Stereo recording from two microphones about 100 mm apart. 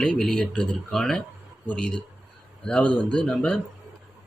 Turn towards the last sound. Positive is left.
turn(degrees=10)  # may be behind; listen again after turning